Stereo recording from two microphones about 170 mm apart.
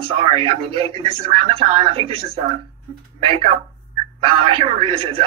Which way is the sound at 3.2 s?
35° right (ahead or behind).